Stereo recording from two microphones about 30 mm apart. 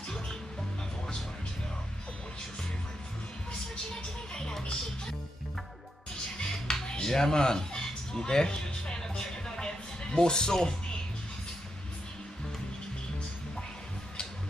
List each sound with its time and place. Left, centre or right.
3.9 s music: left
6.3 s music: left
7.1 s speech: centre
9.1 s music: left